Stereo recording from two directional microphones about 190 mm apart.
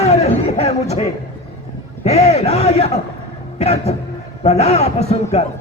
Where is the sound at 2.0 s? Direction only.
35° left (ahead or behind).